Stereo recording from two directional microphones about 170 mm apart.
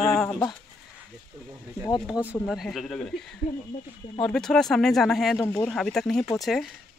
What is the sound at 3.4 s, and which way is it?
Speech, 50° left (ahead or behind).